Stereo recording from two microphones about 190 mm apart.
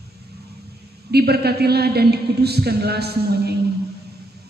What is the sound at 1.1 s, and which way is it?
A man's voice, 55° right (ahead or behind).